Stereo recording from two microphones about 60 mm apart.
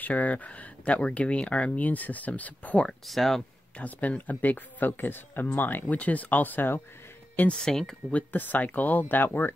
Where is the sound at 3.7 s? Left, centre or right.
Left.